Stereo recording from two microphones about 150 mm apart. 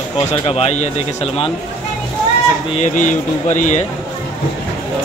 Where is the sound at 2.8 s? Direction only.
60° left (ahead or behind).